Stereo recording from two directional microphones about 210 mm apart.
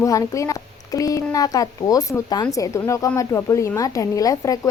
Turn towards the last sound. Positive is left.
turn(degrees=15)  # may be behind; listen again after turning